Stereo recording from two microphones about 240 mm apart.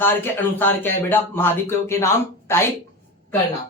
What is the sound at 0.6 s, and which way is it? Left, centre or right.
Speech, centre.